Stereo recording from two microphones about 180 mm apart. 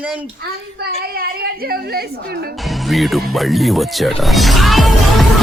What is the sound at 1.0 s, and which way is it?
A woman's voice, 55° right (ahead or behind).